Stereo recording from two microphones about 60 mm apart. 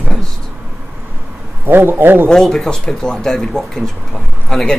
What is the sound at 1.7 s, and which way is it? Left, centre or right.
Speech, right.